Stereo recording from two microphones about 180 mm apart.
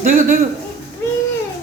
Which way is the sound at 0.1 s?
50° right (ahead or behind).